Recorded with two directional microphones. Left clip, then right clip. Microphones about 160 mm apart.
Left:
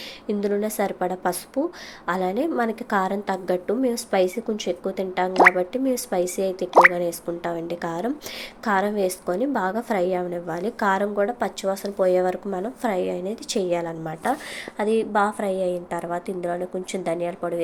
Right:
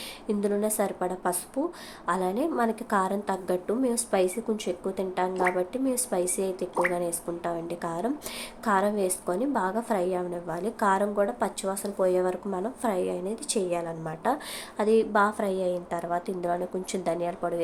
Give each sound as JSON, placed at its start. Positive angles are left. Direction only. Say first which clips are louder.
{"t": 0.3, "sound": "a woman's voice", "louder": "left 3 dB", "side_deg": 10}
{"t": 5.3, "sound": "speech", "louder": "left 15 dB", "side_deg": 65}
{"t": 5.5, "sound": "a woman's voice", "louder": "left 5 dB", "side_deg": 15}